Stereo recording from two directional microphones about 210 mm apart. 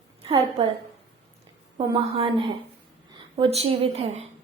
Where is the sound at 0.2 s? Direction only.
25° right (ahead or behind).